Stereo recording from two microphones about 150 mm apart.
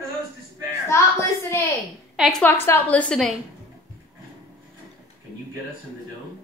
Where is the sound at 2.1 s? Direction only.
Centre (ahead or behind).